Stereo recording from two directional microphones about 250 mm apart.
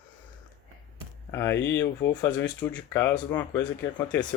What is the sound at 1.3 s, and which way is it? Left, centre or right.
Speech, centre.